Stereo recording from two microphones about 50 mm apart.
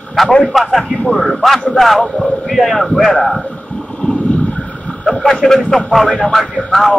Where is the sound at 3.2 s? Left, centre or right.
Centre; by 5.0 s left.